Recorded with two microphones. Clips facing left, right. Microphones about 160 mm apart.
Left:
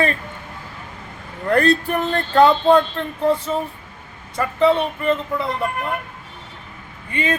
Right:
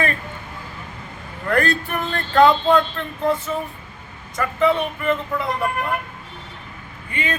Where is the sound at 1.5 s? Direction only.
30° left (ahead or behind).